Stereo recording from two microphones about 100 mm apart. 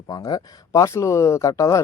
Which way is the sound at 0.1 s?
40° left (ahead or behind).